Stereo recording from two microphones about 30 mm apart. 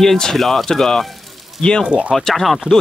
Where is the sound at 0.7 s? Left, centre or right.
Centre.